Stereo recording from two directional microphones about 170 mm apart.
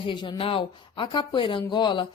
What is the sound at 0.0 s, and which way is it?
Speech, 30° left (ahead or behind).